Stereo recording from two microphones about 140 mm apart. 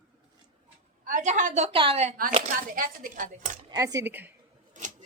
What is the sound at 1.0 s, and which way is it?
Speech, 65° right (ahead or behind).